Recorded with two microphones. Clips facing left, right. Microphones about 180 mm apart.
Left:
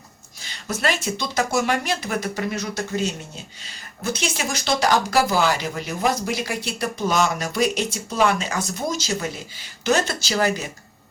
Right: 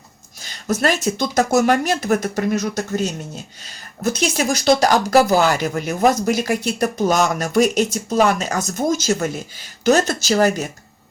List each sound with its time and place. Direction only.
0.4 s speech: 45° right (ahead or behind)